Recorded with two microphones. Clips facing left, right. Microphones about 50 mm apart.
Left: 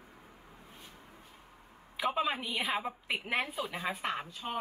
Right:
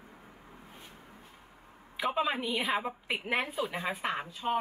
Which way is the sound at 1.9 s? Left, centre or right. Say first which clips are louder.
Right 1 dB; centre.